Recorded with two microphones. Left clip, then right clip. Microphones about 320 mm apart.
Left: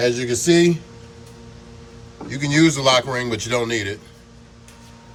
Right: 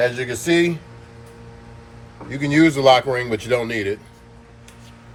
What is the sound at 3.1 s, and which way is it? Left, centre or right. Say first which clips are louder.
Speech: right 2 dB; centre.